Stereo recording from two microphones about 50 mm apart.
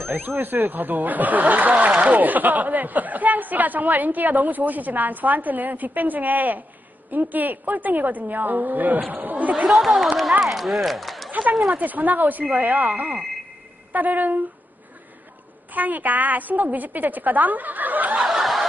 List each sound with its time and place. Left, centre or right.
0.0 s speech: right
9.5 s speech: centre
9.8 s speech: centre
11.5 s speech: right
15.7 s speech: right
18.2 s snicker: centre